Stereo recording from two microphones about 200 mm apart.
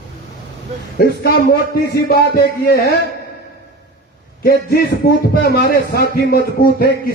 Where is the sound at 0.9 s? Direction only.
50° left (ahead or behind).